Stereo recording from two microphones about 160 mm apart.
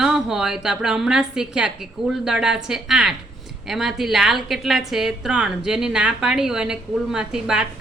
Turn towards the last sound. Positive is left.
turn(degrees=-5)  # may be behind; listen again after turning